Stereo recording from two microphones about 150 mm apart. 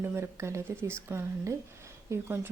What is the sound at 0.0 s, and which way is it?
A woman's voice, 15° right (ahead or behind).